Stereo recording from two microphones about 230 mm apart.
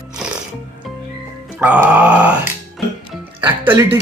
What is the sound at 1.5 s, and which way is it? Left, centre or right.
Speech, centre.